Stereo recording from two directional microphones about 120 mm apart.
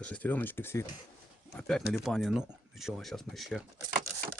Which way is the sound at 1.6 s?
5° left (ahead or behind).